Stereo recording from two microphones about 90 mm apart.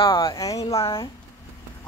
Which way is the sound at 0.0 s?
70° left (ahead or behind).